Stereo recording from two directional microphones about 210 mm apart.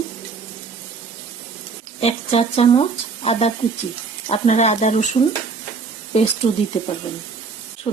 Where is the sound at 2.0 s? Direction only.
30° left (ahead or behind).